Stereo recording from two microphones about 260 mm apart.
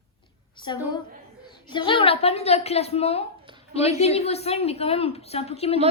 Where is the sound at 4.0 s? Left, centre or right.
Left.